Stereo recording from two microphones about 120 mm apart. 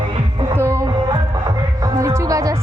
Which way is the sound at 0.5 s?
20° right (ahead or behind).